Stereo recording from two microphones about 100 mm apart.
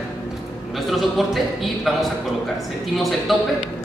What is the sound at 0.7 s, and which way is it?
A man's voice, centre (ahead or behind).